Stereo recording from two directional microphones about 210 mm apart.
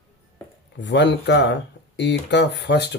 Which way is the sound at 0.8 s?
55° left (ahead or behind).